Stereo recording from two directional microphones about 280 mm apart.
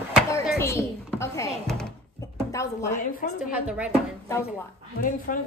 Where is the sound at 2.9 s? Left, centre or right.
Left.